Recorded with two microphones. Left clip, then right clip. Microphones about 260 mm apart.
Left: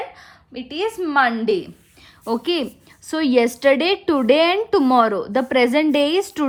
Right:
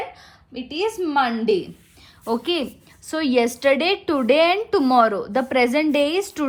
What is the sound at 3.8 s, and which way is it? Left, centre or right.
Speech, centre.